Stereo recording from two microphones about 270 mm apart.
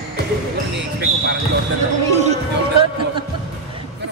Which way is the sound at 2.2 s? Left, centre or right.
Right.